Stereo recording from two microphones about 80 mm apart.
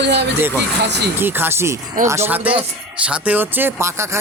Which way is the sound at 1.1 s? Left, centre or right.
Right.